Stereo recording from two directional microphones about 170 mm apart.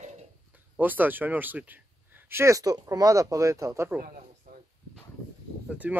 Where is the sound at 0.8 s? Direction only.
10° right (ahead or behind).